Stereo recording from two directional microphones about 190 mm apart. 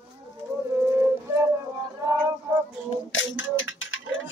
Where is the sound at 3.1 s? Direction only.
90° left.